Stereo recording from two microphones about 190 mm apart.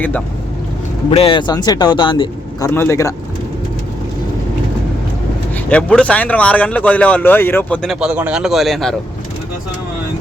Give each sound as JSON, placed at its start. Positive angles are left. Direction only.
{"t": 1.1, "sound": "speech", "side_deg": 30}
{"t": 2.6, "sound": "speech", "side_deg": 15}
{"t": 5.6, "sound": "speech", "side_deg": 5}